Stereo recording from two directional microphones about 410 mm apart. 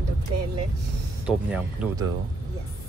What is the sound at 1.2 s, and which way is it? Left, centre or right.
Speech, centre.